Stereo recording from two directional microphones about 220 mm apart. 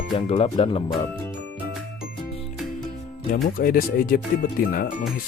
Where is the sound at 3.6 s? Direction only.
40° left (ahead or behind).